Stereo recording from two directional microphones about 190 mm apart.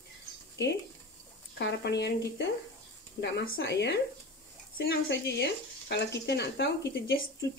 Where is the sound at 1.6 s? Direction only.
65° left (ahead or behind).